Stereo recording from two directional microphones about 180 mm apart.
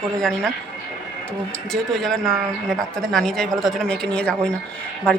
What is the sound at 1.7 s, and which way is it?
Speech, centre (ahead or behind).